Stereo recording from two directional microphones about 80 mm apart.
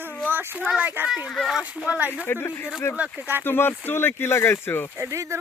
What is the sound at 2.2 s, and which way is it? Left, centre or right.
Speech, left.